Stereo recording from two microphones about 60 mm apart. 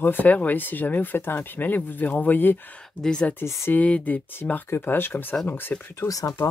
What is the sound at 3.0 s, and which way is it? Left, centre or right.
Speech, centre.